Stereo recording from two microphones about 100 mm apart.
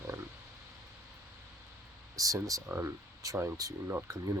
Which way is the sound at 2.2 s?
35° right (ahead or behind).